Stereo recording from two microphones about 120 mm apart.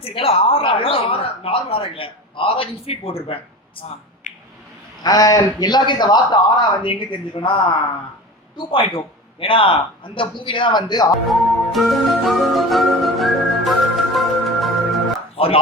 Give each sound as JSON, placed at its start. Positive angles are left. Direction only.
{"t": 0.0, "sound": "speech", "side_deg": 50}
{"t": 4.3, "sound": "squish", "side_deg": 90}
{"t": 5.0, "sound": "a man's voice", "side_deg": 30}
{"t": 8.5, "sound": "speech", "side_deg": 45}
{"t": 11.3, "sound": "music", "side_deg": 0}
{"t": 15.4, "sound": "speech", "side_deg": 55}